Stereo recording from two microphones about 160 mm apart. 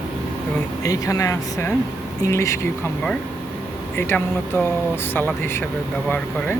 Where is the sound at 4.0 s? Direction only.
15° left (ahead or behind).